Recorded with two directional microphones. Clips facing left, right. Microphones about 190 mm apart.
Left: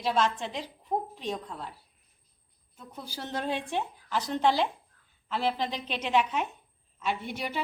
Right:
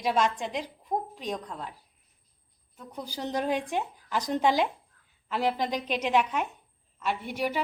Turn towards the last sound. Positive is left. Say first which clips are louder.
# right 3 dB
turn(degrees=-10)  # may be behind; listen again after turning